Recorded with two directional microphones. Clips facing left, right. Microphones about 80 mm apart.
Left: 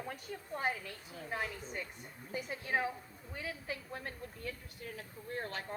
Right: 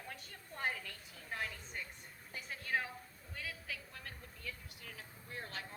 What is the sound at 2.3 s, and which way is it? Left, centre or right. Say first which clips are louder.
A woman's voice: left 4 dB; centre.